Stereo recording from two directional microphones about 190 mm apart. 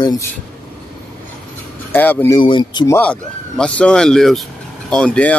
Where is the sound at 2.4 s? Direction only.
25° left (ahead or behind).